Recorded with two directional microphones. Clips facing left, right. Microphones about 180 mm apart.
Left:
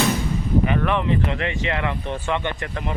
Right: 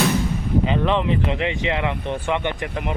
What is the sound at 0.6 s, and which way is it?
Speech, 20° right (ahead or behind).